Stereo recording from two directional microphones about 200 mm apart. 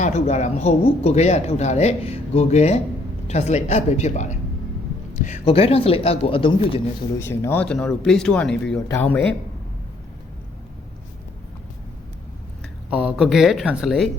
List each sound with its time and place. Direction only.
0.0 s speech: 35° left (ahead or behind)
7.2 s speech: 10° left (ahead or behind)
12.9 s speech: 5° right (ahead or behind)